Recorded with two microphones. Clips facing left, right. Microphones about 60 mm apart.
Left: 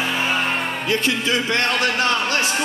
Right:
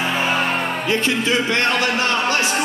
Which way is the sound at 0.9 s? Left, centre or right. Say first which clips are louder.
Right 1 dB; right.